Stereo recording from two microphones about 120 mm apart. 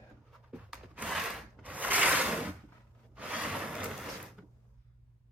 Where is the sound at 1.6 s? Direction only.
15° right (ahead or behind).